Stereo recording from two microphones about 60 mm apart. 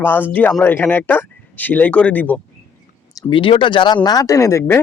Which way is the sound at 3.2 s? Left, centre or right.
Left.